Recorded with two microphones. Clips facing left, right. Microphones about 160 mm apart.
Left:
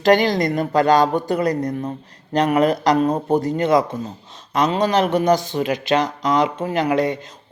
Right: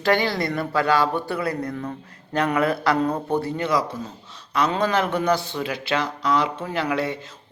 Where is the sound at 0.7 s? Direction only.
45° left (ahead or behind).